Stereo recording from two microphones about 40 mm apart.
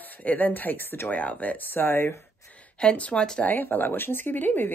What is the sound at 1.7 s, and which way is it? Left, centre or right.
Speech, left.